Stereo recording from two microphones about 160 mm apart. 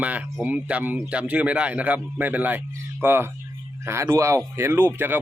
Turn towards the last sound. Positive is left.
turn(degrees=-15)  # may be behind; listen again after turning